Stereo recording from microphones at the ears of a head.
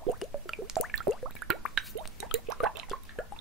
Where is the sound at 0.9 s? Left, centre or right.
Right.